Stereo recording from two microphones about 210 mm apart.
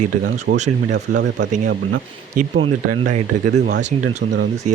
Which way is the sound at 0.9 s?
55° right (ahead or behind).